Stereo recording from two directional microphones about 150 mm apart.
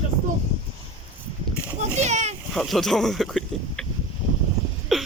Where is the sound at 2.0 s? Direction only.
50° right (ahead or behind).